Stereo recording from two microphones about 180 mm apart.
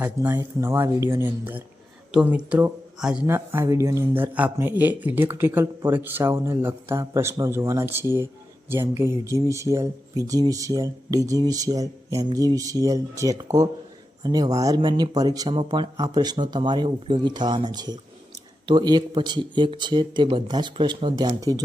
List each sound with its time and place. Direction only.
0.0 s speech: 10° right (ahead or behind)